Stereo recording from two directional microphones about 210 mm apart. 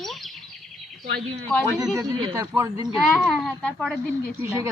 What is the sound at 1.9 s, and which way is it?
Speech, 20° right (ahead or behind).